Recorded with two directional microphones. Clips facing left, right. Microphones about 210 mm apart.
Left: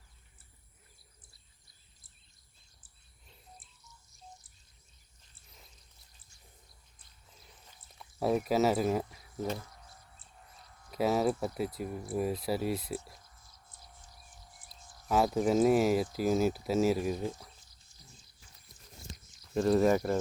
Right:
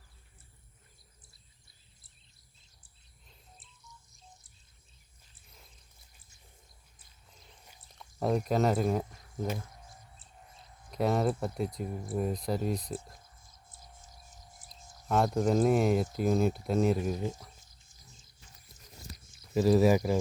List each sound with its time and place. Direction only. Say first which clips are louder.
7.9 s speech: even; 5° left (ahead or behind)
9.5 s a sound: even; 15° right (ahead or behind)
10.9 s speech: even; 5° left (ahead or behind)
14.1 s a sound: right 2 dB; 20° right (ahead or behind)
15.0 s speech: even; 5° left (ahead or behind)
19.5 s speech: right 2 dB; 5° right (ahead or behind)